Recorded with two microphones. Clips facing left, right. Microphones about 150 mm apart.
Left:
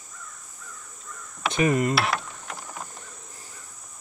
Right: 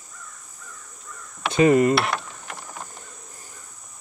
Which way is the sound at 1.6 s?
25° right (ahead or behind).